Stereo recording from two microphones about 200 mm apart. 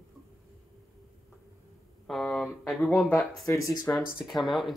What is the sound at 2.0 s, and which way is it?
Speech, 5° left (ahead or behind).